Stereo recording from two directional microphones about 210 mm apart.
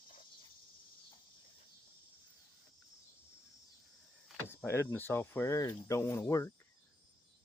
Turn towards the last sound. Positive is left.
turn(degrees=15)  # may be behind; listen again after turning